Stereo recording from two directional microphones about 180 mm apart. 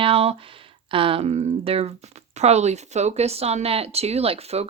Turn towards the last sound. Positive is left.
turn(degrees=-35)  # may be behind; listen again after turning